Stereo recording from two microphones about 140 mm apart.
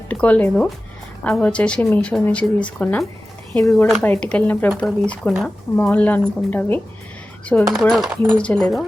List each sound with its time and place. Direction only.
0.1 s speech: 10° left (ahead or behind)
3.6 s speech: 20° left (ahead or behind)
4.0 s speech: 10° left (ahead or behind)
7.4 s speech: centre (ahead or behind)